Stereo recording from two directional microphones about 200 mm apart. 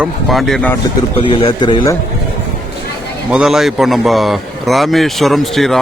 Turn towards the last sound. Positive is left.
turn(degrees=0)  # may be behind; listen again after turning